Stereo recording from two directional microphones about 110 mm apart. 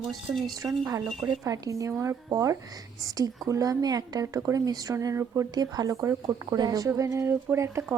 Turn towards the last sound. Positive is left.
turn(degrees=-25)  # may be behind; listen again after turning